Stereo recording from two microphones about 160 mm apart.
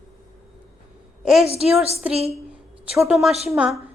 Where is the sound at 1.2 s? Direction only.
Centre (ahead or behind).